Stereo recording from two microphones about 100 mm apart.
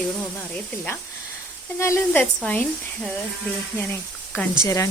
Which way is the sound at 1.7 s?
25° left (ahead or behind).